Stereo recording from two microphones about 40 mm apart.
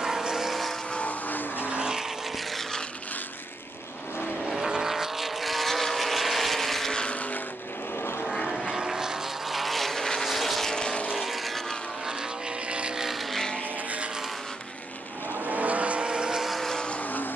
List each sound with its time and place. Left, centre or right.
0.0 s vehicle: centre
0.9 s vehicle: left
1.7 s vehicle: right
4.5 s vehicle: centre
7.1 s vehicle: left
8.7 s vehicle: centre
9.5 s vehicle: centre
10.7 s vehicle: centre
11.1 s vehicle: centre
12.6 s vehicle: right
12.9 s vehicle: centre
15.4 s vehicle: right
16.1 s vehicle: centre
17.0 s vehicle: left